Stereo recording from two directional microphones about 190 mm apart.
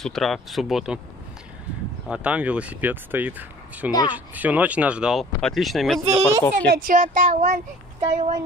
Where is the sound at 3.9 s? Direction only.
20° left (ahead or behind).